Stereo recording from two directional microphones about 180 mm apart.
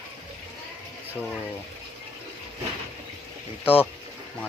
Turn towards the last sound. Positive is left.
turn(degrees=10)  # may be behind; listen again after turning